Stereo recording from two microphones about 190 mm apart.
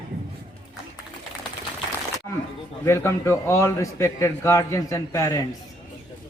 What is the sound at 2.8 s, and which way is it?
A man's voice, 15° left (ahead or behind).